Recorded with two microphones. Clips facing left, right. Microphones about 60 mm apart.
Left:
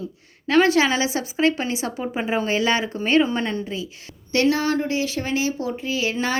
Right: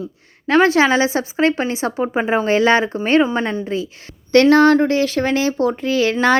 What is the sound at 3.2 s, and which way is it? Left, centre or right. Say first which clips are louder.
Speech: right 4 dB; right.